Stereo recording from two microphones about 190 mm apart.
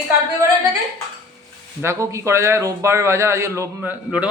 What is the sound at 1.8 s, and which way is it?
A man's voice, 15° right (ahead or behind).